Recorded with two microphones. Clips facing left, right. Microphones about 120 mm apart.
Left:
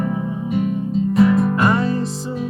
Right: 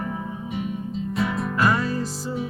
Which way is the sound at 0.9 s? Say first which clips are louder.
Left 12 dB; centre (ahead or behind).